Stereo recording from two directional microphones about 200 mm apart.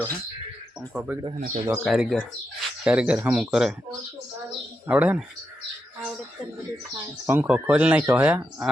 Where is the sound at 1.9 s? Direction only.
Centre (ahead or behind).